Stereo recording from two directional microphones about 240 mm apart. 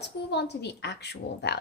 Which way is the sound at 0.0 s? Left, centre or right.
Left.